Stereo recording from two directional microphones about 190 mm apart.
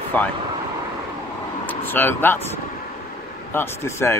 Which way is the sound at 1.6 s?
10° left (ahead or behind).